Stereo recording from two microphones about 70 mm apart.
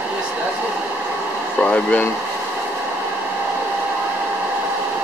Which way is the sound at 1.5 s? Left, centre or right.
Centre.